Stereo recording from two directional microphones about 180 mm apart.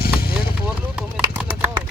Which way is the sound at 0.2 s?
55° left (ahead or behind).